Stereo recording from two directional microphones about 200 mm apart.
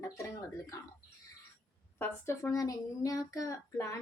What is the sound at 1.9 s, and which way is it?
Speech, 10° left (ahead or behind).